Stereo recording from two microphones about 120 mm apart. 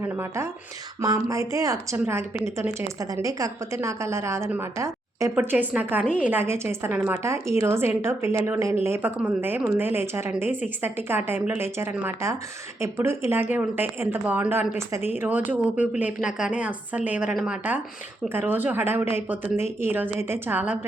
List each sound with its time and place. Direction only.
0.0 s a woman's voice: 25° right (ahead or behind)